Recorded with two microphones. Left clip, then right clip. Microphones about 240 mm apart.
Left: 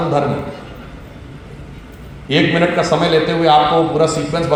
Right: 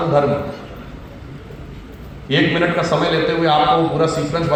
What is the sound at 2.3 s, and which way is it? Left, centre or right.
A man's voice, left.